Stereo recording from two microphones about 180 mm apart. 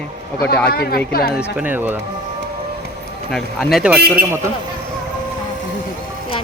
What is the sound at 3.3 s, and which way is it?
A man's voice, centre (ahead or behind).